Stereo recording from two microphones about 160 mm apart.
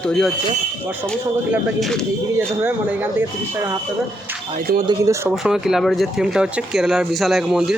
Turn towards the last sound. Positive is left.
turn(degrees=0)  # may be behind; listen again after turning